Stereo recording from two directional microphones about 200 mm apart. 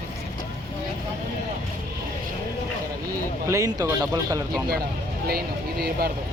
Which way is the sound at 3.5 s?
15° right (ahead or behind).